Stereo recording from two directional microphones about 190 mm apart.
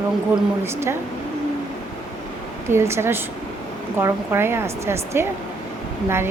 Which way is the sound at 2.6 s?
15° right (ahead or behind).